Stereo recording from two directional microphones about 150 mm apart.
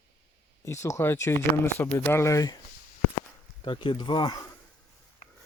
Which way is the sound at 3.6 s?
35° left (ahead or behind).